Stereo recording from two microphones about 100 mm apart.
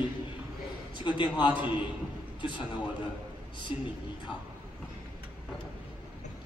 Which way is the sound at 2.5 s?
50° left (ahead or behind).